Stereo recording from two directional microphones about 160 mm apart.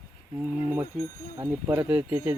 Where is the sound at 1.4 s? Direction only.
15° right (ahead or behind).